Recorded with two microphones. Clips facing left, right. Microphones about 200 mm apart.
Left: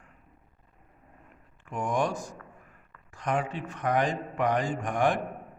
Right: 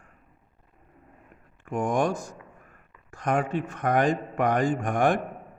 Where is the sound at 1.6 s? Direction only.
50° right (ahead or behind).